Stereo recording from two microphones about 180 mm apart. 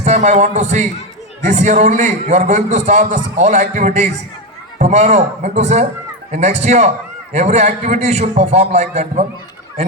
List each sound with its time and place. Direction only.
0.0 s a man's voice: 40° right (ahead or behind)